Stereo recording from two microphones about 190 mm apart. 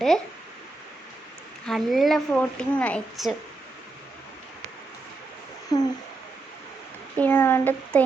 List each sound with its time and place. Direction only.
1.6 s a woman's voice: centre (ahead or behind)
5.7 s a sound: 20° left (ahead or behind)
7.2 s speech: 10° left (ahead or behind)